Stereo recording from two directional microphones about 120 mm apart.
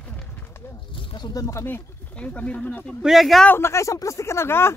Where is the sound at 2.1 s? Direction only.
10° left (ahead or behind).